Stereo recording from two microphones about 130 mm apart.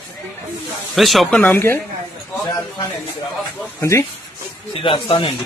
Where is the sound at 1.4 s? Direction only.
20° left (ahead or behind).